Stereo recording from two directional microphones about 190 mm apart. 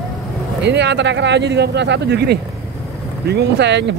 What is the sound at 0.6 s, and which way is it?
Speech, 65° right (ahead or behind).